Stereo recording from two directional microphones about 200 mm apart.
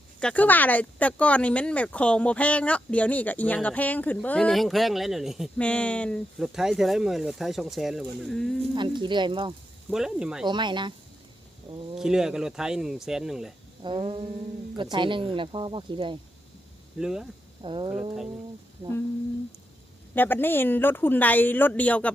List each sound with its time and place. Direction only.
0.2 s speech: 5° left (ahead or behind)
8.7 s speech: 25° right (ahead or behind)
9.9 s speech: 5° right (ahead or behind)
10.4 s speech: 20° right (ahead or behind)
11.9 s speech: 5° right (ahead or behind)
13.8 s speech: 25° right (ahead or behind)
17.0 s speech: 5° right (ahead or behind)
17.6 s speech: 25° right (ahead or behind)
20.1 s speech: 10° left (ahead or behind)